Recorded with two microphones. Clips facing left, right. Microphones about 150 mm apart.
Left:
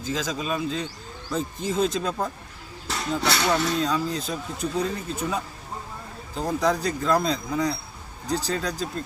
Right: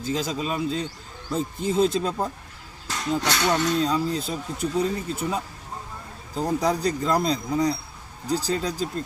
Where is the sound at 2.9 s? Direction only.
10° left (ahead or behind).